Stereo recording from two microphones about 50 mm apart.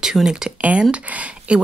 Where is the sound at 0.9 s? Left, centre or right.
Right.